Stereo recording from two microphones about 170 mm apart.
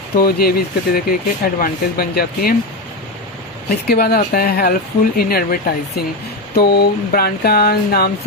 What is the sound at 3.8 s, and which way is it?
Speech, 65° left (ahead or behind).